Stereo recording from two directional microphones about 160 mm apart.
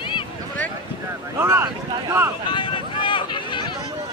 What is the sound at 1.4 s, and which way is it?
Speech, 15° right (ahead or behind).